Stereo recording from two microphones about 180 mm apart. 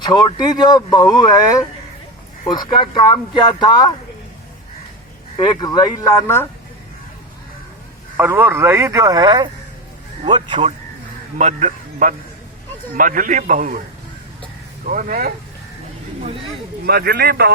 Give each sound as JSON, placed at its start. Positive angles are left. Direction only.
{"t": 0.0, "sound": "speech", "side_deg": 25}
{"t": 5.4, "sound": "speech", "side_deg": 25}
{"t": 8.1, "sound": "speech", "side_deg": -10}
{"t": 11.3, "sound": "a man's voice", "side_deg": -40}
{"t": 14.8, "sound": "a man's voice", "side_deg": -50}
{"t": 16.2, "sound": "speech", "side_deg": -30}
{"t": 16.8, "sound": "speech", "side_deg": -60}